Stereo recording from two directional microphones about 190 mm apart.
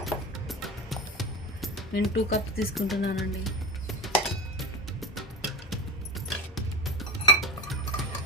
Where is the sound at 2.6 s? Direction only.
Centre (ahead or behind).